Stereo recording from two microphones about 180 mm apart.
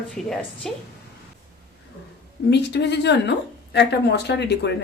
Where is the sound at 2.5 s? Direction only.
70° left (ahead or behind).